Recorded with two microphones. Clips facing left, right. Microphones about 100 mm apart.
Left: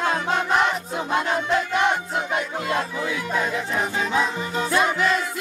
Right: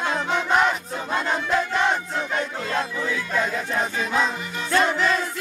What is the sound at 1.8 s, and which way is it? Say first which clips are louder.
Crowd: left 1 dB; 15° left (ahead or behind).